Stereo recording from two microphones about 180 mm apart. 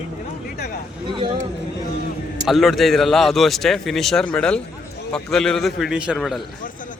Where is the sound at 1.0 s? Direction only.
25° right (ahead or behind).